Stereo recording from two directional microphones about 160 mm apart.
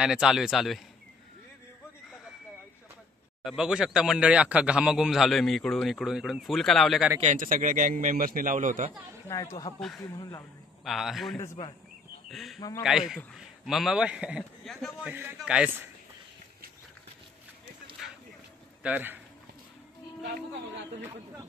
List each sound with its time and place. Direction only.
0.0 s a man's voice: 5° right (ahead or behind)
3.4 s a man's voice: 5° right (ahead or behind)
7.2 s a man's voice: 55° right (ahead or behind)
9.3 s speech: 20° left (ahead or behind)
9.8 s a man's voice: centre (ahead or behind)
12.5 s speech: 25° left (ahead or behind)
12.8 s a man's voice: 5° right (ahead or behind)
18.8 s speech: 10° right (ahead or behind)